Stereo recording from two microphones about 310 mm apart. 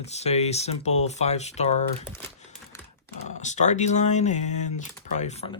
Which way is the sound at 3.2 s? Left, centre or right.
Left.